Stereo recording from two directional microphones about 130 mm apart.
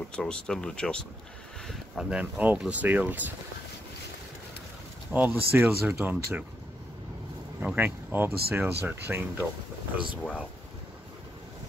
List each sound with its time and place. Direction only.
0.1 s speech: 5° left (ahead or behind)
1.7 s speech: 5° right (ahead or behind)
5.1 s speech: 15° right (ahead or behind)
7.6 s speech: 15° right (ahead or behind)